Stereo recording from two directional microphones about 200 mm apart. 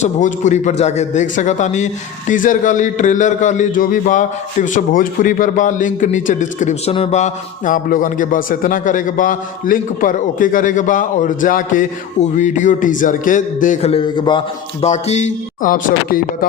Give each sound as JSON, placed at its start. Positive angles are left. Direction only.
{"t": 0.0, "sound": "a man's voice", "side_deg": 40}